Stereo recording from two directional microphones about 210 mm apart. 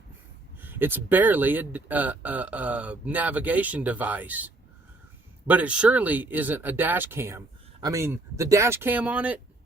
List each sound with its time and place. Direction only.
0.6 s speech: 10° right (ahead or behind)